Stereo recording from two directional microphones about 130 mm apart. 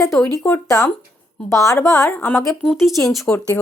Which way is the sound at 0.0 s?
Centre (ahead or behind).